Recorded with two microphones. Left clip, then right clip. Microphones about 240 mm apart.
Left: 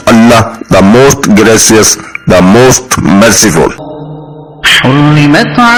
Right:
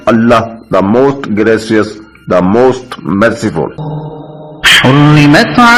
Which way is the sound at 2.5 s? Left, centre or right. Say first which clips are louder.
Left 4 dB; left.